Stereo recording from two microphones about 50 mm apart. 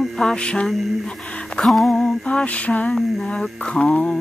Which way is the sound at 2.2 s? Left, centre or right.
Left.